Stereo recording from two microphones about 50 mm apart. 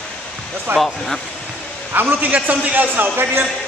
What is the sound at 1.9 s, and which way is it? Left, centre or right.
A man's voice, right.